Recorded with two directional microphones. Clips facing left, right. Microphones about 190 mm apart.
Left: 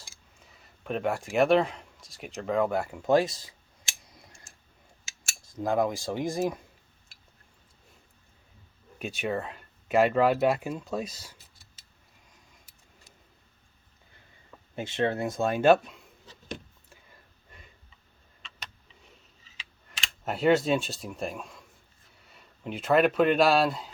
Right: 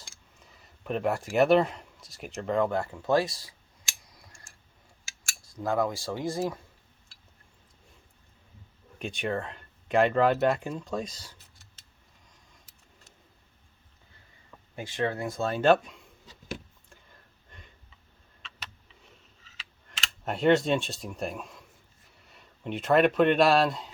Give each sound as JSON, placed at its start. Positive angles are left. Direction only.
{"t": 0.3, "sound": "a sound", "side_deg": 0}
{"t": 5.0, "sound": "speech", "side_deg": 20}
{"t": 9.0, "sound": "speech", "side_deg": 5}
{"t": 14.8, "sound": "speech", "side_deg": 25}
{"t": 16.9, "sound": "a sound", "side_deg": 5}
{"t": 20.2, "sound": "speech", "side_deg": 5}